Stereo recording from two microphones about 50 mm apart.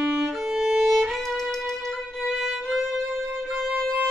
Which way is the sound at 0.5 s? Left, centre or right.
Centre.